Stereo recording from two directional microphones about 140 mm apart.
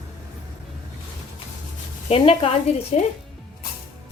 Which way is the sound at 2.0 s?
45° left (ahead or behind).